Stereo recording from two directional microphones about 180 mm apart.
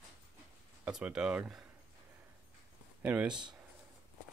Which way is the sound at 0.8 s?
5° right (ahead or behind).